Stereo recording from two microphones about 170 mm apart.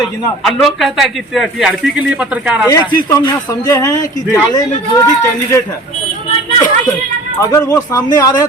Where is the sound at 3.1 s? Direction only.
20° left (ahead or behind).